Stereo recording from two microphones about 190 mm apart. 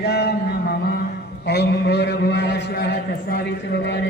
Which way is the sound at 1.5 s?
60° left (ahead or behind).